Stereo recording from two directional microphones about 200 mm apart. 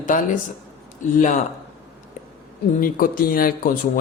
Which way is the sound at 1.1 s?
40° left (ahead or behind).